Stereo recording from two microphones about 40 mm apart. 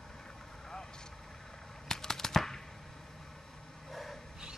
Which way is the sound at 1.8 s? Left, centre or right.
Centre.